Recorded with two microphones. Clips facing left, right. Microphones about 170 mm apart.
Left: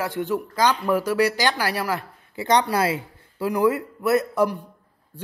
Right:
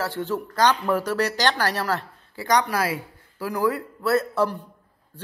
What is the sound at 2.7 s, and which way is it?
A man's voice, 25° left (ahead or behind).